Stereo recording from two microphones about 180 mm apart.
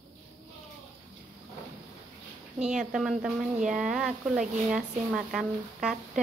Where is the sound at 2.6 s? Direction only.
5° right (ahead or behind).